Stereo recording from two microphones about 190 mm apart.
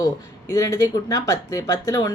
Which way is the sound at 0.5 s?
15° left (ahead or behind).